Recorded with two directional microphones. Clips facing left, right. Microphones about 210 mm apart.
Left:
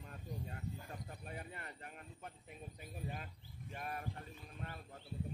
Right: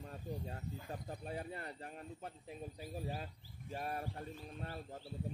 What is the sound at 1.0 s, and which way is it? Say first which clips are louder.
Speech: right 5 dB; 35° right (ahead or behind).